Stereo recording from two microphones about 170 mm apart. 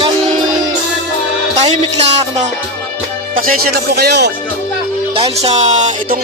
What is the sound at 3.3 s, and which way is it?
Speech, 60° right (ahead or behind).